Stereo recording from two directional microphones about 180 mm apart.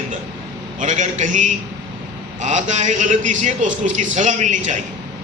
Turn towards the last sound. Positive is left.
turn(degrees=-45)  # may be behind; listen again after turning